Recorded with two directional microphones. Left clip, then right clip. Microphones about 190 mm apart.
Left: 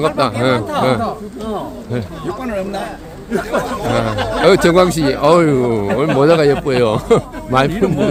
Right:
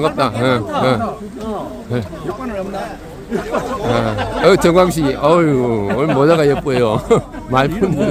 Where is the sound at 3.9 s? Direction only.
5° right (ahead or behind).